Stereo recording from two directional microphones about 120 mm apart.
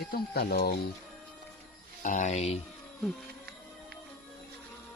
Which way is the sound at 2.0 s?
90° left.